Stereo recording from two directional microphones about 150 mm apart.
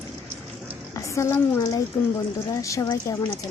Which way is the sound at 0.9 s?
20° left (ahead or behind).